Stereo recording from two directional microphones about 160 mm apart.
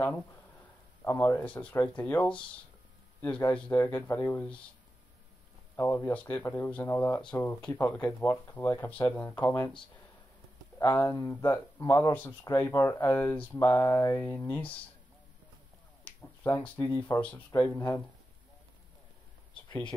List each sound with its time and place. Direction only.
1.0 s speech: 15° left (ahead or behind)
5.8 s speech: 15° left (ahead or behind)
10.8 s speech: 20° left (ahead or behind)
16.2 s speech: 15° left (ahead or behind)
19.5 s a sound: 30° left (ahead or behind)